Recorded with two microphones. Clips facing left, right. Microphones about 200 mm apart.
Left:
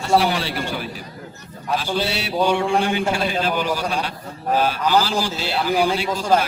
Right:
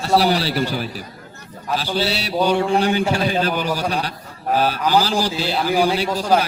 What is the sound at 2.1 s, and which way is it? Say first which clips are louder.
A man's voice: right 1 dB; 40° right (ahead or behind).